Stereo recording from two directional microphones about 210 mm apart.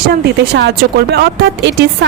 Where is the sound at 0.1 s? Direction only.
50° right (ahead or behind).